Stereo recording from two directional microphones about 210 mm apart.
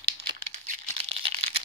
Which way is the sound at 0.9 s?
30° right (ahead or behind).